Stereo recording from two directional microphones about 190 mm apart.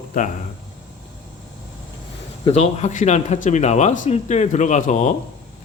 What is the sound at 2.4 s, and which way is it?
Speech, 35° left (ahead or behind).